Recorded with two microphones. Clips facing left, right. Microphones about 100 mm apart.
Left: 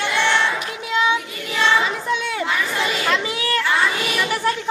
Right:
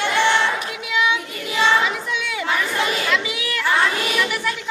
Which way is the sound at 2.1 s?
40° left (ahead or behind).